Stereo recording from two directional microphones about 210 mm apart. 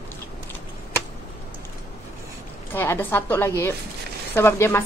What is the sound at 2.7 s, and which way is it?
A woman's voice, 10° left (ahead or behind).